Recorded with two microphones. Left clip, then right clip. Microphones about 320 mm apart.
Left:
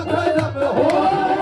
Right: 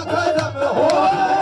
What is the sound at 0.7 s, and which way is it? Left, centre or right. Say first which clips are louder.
Music: right 2 dB; right.